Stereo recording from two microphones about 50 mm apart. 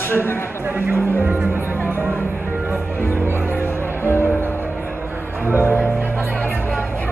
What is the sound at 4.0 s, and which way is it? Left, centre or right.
Music, right.